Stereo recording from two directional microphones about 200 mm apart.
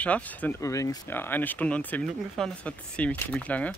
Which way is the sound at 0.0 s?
5° left (ahead or behind).